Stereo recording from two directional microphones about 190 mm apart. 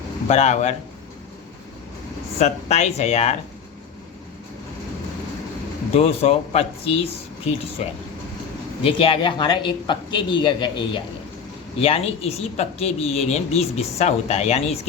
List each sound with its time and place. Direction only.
0.3 s speech: 35° left (ahead or behind)
2.4 s speech: 35° left (ahead or behind)
5.9 s speech: 30° left (ahead or behind)
7.8 s speech: 35° left (ahead or behind)